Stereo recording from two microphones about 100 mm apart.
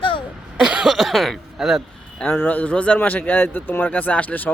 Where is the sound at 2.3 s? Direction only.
20° left (ahead or behind).